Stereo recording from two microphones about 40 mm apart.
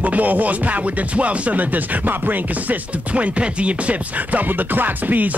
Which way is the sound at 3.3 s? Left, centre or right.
Right.